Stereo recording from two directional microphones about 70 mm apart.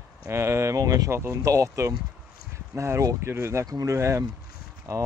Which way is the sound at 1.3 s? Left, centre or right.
Right.